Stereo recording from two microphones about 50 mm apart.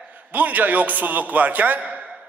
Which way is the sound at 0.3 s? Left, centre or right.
Right.